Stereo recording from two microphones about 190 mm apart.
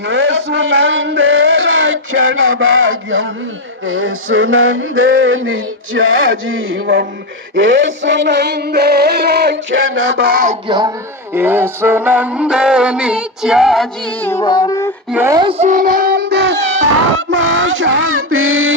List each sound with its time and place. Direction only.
0.1 s a sound: 70° right (ahead or behind); by 3.2 s 85° right
3.8 s male singing: 90° right; by 7.1 s 70° right (ahead or behind)
7.5 s music: 70° right (ahead or behind); by 10.6 s 45° right (ahead or behind)
10.7 s speech: 20° right (ahead or behind)
11.3 s music: 10° right (ahead or behind)
14.3 s music: 20° left (ahead or behind)
15.1 s speech: 10° right (ahead or behind)
15.4 s speech: 30° right (ahead or behind); by 18.8 s 90° right